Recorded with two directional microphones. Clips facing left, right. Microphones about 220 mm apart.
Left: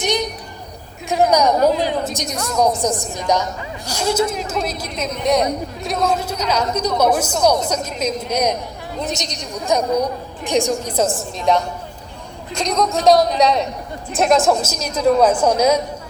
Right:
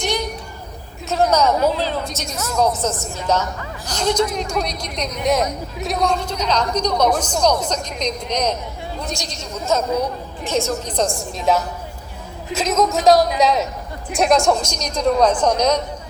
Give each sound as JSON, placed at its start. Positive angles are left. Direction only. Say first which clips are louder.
{"t": 0.0, "sound": "a sound", "louder": "left 2 dB", "side_deg": 20}
{"t": 1.3, "sound": "a woman's voice", "louder": "left 3 dB", "side_deg": 15}
{"t": 9.0, "sound": "a woman's voice", "louder": "left 6 dB", "side_deg": 20}